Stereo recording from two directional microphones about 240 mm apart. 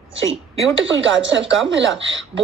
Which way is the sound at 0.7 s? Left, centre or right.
Right.